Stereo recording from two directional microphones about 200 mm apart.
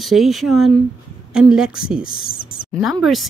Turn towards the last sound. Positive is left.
turn(degrees=0)  # may be behind; listen again after turning